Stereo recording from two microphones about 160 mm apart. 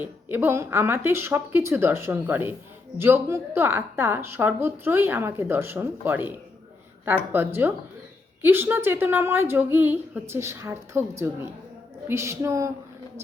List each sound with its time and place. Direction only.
0.0 s speech: 10° right (ahead or behind)
7.3 s speech: 15° right (ahead or behind)